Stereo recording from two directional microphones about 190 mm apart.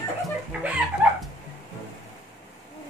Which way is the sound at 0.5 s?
5° right (ahead or behind).